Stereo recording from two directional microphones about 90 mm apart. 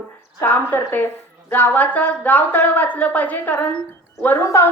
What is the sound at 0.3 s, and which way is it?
A woman's voice, 25° left (ahead or behind).